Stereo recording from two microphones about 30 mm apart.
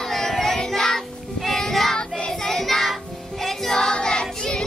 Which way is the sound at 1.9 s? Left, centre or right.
Left.